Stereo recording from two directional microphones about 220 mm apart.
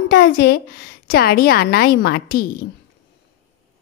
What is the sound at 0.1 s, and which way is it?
A woman's voice, 45° left (ahead or behind).